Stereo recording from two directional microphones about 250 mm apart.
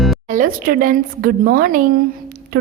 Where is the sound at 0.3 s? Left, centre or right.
Right.